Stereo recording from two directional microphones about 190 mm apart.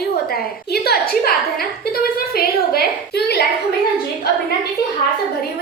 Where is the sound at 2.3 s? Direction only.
55° left (ahead or behind).